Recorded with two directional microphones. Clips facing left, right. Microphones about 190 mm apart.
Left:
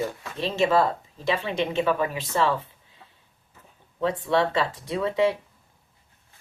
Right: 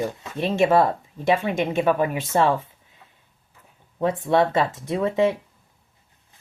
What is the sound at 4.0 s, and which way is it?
Speech, 50° right (ahead or behind).